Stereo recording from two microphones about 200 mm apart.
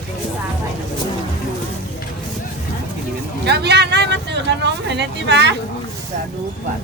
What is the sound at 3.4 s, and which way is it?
Speech, 55° right (ahead or behind).